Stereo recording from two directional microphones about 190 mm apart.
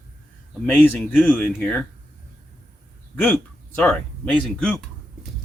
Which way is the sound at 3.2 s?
5° left (ahead or behind).